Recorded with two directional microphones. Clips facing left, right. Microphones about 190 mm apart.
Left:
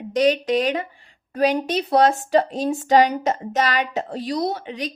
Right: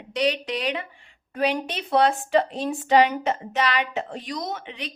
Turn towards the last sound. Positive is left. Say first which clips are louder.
# left 7 dB
turn(degrees=40)  # may be behind; listen again after turning